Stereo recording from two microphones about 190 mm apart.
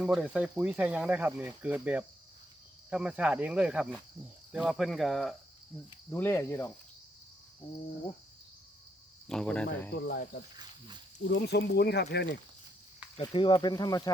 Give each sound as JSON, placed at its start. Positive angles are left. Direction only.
{"t": 0.0, "sound": "speech", "side_deg": -5}
{"t": 6.1, "sound": "cricket", "side_deg": 10}
{"t": 9.2, "sound": "speech", "side_deg": 5}
{"t": 9.9, "sound": "speech", "side_deg": 60}
{"t": 13.1, "sound": "speech", "side_deg": 25}